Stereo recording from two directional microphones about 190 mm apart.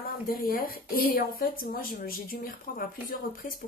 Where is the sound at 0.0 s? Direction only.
50° left (ahead or behind).